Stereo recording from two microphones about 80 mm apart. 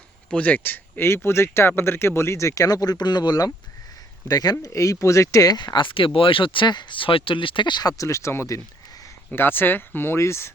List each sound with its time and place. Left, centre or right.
0.3 s speech: centre; by 5.5 s left
5.5 s speech: left
7.9 s speech: left